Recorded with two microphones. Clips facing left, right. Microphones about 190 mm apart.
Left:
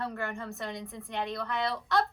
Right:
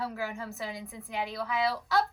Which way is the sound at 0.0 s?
5° right (ahead or behind).